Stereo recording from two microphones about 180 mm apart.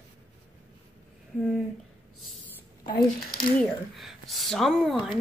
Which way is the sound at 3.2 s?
55° left (ahead or behind).